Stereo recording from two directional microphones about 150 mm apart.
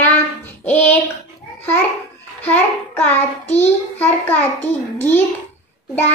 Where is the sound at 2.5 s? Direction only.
10° left (ahead or behind).